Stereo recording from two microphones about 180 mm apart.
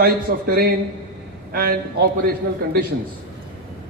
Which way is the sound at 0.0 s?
55° right (ahead or behind).